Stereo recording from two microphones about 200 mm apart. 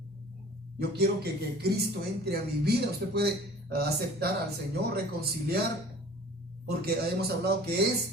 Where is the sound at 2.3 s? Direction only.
55° right (ahead or behind).